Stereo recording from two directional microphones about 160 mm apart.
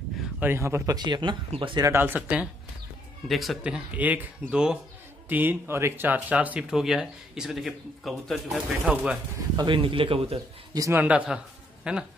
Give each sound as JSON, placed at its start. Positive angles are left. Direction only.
{"t": 0.2, "sound": "speech", "side_deg": -10}
{"t": 1.9, "sound": "speech", "side_deg": -15}
{"t": 9.6, "sound": "speech", "side_deg": -30}
{"t": 10.7, "sound": "speech", "side_deg": -20}